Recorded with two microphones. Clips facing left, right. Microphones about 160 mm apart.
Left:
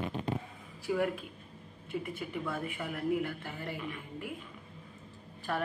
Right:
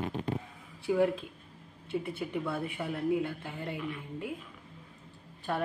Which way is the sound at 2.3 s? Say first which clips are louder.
Right 3 dB; 5° right (ahead or behind).